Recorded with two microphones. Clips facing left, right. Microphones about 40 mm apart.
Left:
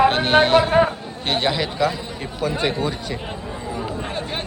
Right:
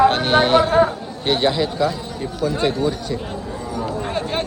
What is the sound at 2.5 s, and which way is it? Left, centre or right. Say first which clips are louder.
Speech: right 3 dB; left.